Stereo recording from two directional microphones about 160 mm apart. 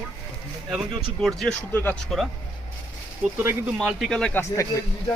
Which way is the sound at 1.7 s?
15° left (ahead or behind).